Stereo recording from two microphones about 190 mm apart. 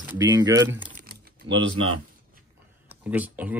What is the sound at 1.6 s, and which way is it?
Speech, 85° right.